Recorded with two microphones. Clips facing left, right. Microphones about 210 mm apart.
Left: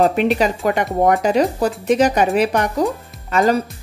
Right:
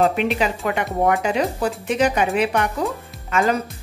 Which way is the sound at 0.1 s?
40° left (ahead or behind).